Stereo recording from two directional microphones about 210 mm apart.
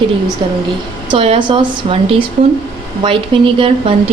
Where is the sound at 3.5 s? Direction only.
25° right (ahead or behind).